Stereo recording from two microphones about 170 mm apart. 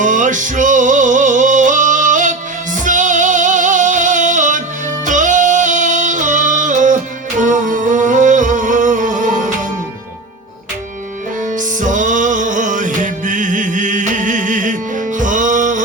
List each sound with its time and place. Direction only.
0.0 s music: 50° right (ahead or behind)
5.0 s yodeling: 50° right (ahead or behind)
11.4 s music: 50° right (ahead or behind)